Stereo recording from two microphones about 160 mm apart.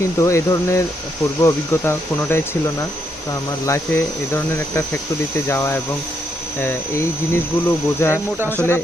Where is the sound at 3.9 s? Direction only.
15° left (ahead or behind).